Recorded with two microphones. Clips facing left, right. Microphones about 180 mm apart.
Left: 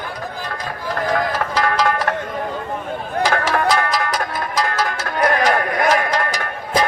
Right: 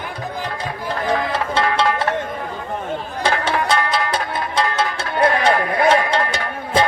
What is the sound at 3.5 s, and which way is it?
Music, 30° right (ahead or behind).